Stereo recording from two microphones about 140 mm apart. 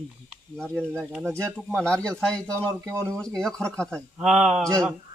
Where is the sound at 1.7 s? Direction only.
5° left (ahead or behind).